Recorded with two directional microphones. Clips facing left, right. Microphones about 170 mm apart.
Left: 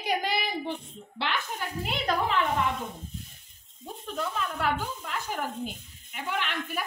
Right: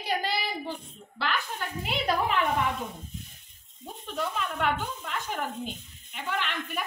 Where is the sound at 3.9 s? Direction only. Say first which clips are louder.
Even; centre (ahead or behind).